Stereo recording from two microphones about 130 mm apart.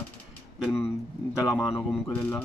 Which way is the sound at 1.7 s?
20° left (ahead or behind).